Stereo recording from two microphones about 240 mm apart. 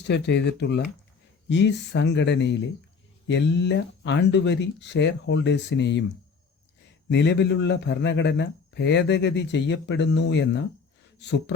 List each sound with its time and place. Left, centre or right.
0.1 s a man's voice: left
7.1 s a man's voice: left